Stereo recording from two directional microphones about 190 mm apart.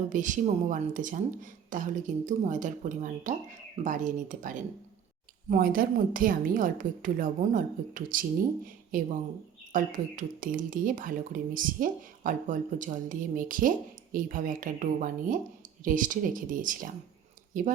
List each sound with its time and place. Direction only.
0.1 s speech: 40° right (ahead or behind)